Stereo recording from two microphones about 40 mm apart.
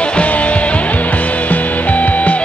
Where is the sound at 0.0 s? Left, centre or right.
Left.